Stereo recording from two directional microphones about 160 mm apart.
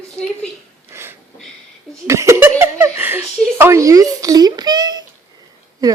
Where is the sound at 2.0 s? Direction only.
20° right (ahead or behind).